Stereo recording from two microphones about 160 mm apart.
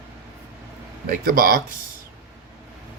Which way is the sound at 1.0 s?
65° right (ahead or behind).